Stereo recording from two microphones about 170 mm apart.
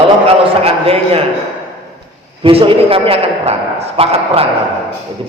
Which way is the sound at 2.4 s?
35° right (ahead or behind).